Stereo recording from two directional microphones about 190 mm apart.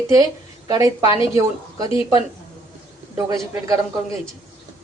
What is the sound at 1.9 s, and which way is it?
Speech, 30° left (ahead or behind).